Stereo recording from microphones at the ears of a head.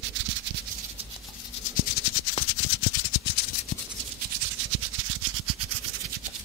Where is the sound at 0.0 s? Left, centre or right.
Right.